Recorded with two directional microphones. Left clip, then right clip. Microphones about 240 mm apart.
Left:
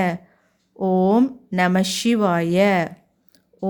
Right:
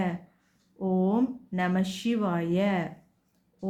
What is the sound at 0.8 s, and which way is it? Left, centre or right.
A woman's voice, left.